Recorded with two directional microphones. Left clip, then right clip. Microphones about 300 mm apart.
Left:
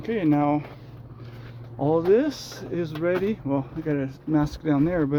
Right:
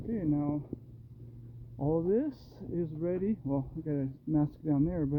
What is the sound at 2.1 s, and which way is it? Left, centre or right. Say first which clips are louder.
Speech: left 11 dB; right.